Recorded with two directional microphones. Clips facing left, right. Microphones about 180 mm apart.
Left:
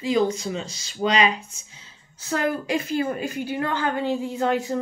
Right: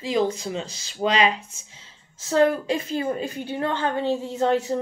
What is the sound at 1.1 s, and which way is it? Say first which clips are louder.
Speech: even; 30° right (ahead or behind).